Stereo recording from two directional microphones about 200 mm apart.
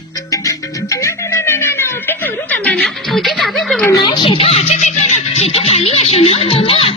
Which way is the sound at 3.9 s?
20° left (ahead or behind).